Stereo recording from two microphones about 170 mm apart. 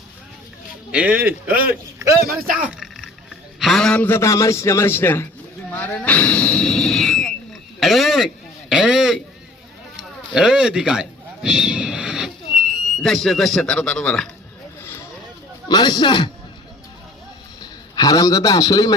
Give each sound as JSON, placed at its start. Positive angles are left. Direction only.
{"t": 0.9, "sound": "a man's voice", "side_deg": -5}
{"t": 2.2, "sound": "speech", "side_deg": -55}
{"t": 2.6, "sound": "a sound", "side_deg": 0}
{"t": 3.6, "sound": "a man's voice", "side_deg": 0}
{"t": 15.7, "sound": "a man's voice", "side_deg": 25}
{"t": 17.6, "sound": "a man's voice", "side_deg": 25}